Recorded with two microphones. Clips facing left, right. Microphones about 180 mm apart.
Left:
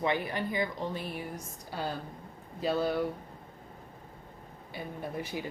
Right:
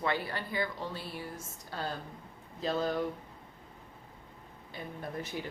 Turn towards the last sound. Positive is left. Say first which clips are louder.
# left 2 dB
turn(degrees=10)  # may be behind; listen again after turning